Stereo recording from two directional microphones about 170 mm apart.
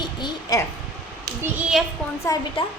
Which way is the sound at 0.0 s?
25° left (ahead or behind).